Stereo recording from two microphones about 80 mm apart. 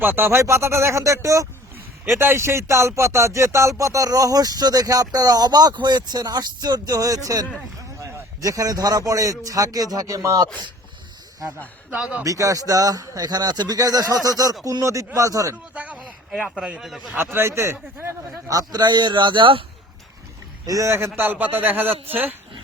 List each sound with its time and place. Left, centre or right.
0.0 s speech: right
11.9 s a man's voice: centre
12.2 s speech: right
15.7 s a sound: centre
16.0 s speech: centre
16.8 s a man's voice: centre
17.3 s speech: right
18.5 s speech: right
20.7 s a man's voice: right